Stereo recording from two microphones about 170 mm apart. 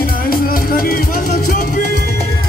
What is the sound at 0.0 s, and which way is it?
Music, 60° left (ahead or behind).